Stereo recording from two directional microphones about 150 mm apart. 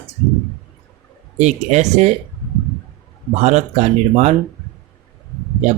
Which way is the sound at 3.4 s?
50° right (ahead or behind).